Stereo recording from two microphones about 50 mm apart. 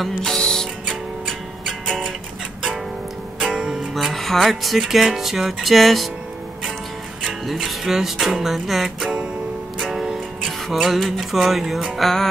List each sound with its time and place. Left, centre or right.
0.0 s music: centre
1.2 s music: centre
3.3 s music: centre
3.9 s speech: centre
7.2 s music: centre